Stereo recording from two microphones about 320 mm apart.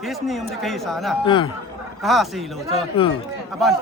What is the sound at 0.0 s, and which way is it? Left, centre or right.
Speech, centre.